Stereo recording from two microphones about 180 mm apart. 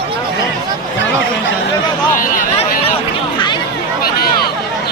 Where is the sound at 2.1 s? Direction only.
50° left (ahead or behind).